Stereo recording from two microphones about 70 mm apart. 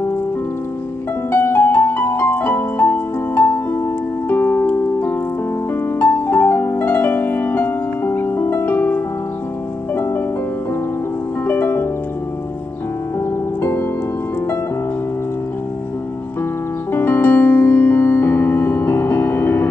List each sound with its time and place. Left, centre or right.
1.3 s music: left
11.4 s harp: left
13.6 s music: left
16.9 s keyboard: left